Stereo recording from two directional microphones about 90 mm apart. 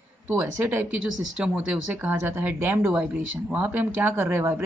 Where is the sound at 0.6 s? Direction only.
20° right (ahead or behind).